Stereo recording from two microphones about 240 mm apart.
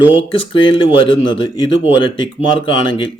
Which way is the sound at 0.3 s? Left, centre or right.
Left.